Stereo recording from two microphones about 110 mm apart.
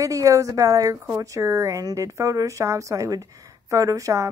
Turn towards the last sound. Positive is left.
turn(degrees=-30)  # may be behind; listen again after turning